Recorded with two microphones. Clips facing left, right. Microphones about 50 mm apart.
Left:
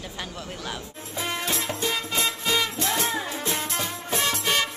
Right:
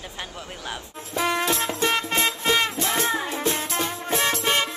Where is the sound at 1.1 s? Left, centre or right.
Right.